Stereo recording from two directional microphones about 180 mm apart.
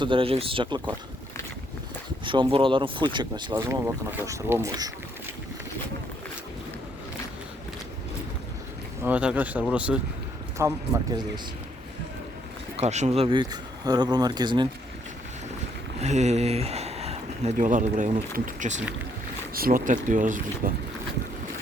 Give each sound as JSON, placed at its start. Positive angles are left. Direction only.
{"t": 0.0, "sound": "speech", "side_deg": -30}
{"t": 2.2, "sound": "speech", "side_deg": -25}
{"t": 9.0, "sound": "speech", "side_deg": -10}
{"t": 10.6, "sound": "speech", "side_deg": -15}
{"t": 12.7, "sound": "speech", "side_deg": -40}
{"t": 16.0, "sound": "speech", "side_deg": -40}